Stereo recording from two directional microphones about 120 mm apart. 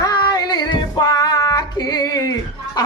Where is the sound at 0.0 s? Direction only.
35° left (ahead or behind).